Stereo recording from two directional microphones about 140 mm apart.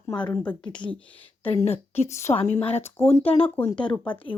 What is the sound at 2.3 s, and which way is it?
Speech, 45° left (ahead or behind).